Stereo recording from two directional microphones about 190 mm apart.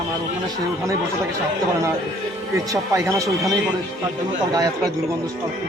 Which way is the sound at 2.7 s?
15° right (ahead or behind).